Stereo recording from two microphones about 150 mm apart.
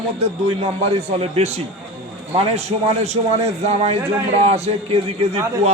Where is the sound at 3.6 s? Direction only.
45° right (ahead or behind).